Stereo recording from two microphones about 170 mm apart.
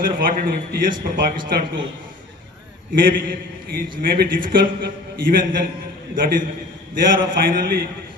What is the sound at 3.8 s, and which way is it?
Speech, 60° right (ahead or behind).